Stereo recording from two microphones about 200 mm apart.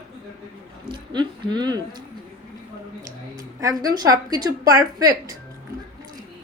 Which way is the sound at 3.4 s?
15° right (ahead or behind).